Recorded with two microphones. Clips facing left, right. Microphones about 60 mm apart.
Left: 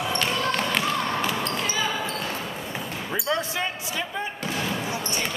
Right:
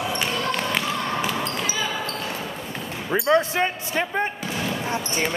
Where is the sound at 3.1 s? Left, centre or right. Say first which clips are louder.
Right 8 dB; right.